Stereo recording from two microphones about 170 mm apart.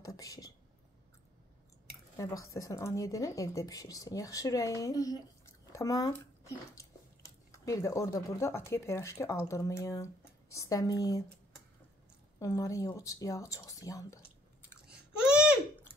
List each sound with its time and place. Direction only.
0.0 s speech: 20° left (ahead or behind)
2.1 s speech: 20° left (ahead or behind)
12.4 s speech: 20° left (ahead or behind)